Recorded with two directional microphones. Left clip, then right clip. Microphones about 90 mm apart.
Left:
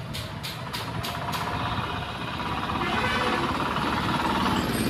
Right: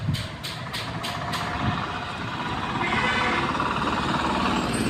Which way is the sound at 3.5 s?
25° right (ahead or behind).